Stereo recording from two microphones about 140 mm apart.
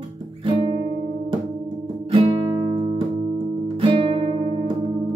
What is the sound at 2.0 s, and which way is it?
Guitar, 40° right (ahead or behind).